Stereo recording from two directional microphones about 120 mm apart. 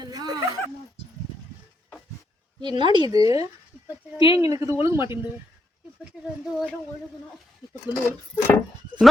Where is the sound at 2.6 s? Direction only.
40° right (ahead or behind).